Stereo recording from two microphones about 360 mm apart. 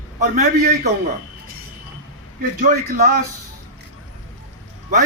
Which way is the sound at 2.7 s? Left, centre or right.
Right.